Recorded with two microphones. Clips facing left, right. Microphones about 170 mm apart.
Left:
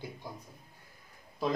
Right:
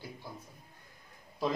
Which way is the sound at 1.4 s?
Centre (ahead or behind).